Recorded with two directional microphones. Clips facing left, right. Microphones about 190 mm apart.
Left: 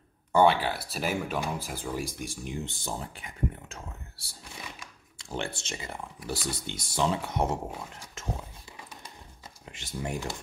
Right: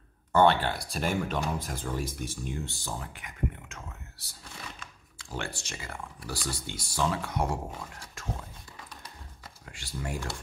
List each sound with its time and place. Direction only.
0.3 s speech: 10° left (ahead or behind)
9.7 s speech: 20° left (ahead or behind)